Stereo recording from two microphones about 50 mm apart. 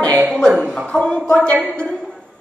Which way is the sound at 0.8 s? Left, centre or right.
Left.